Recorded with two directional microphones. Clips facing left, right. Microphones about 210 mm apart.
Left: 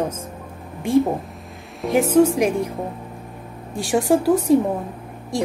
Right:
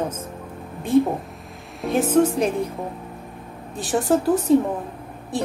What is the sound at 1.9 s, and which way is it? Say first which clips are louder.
Speech: left 3 dB; 10° left (ahead or behind).